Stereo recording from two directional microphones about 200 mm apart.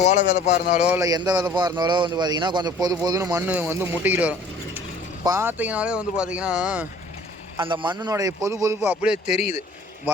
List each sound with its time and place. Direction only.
0.0 s speech: 40° left (ahead or behind)
0.9 s a man's voice: 15° right (ahead or behind)
7.6 s a man's voice: 25° right (ahead or behind); by 9.1 s 10° right (ahead or behind)